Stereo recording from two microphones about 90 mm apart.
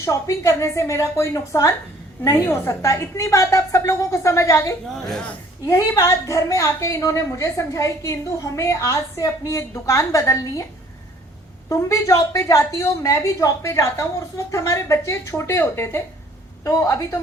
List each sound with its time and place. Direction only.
0.0 s a woman's voice: 35° left (ahead or behind)
4.9 s a woman's voice: 5° left (ahead or behind)
5.6 s a woman's voice: 30° left (ahead or behind)
11.7 s a woman's voice: 35° left (ahead or behind)